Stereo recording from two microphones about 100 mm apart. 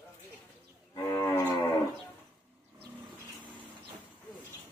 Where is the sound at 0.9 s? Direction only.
30° left (ahead or behind).